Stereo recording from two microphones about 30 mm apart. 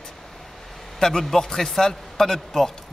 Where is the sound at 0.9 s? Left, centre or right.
Centre.